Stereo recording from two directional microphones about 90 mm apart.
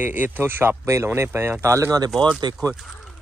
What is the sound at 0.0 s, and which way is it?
Speech, 20° right (ahead or behind).